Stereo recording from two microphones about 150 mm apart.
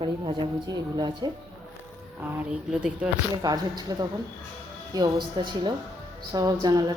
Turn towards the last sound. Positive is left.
turn(degrees=-25)  # may be behind; listen again after turning